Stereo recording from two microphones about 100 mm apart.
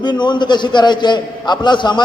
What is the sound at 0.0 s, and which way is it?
A man's voice, 50° left (ahead or behind).